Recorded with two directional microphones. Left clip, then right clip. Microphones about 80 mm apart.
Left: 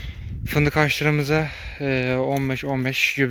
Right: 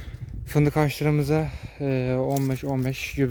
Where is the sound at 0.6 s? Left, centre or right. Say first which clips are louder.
Left 4 dB; right.